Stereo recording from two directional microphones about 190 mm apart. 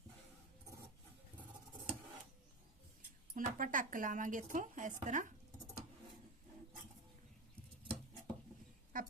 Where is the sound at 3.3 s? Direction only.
45° right (ahead or behind).